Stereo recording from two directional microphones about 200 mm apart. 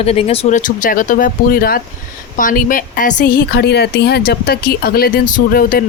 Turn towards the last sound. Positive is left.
turn(degrees=45)  # may be behind; listen again after turning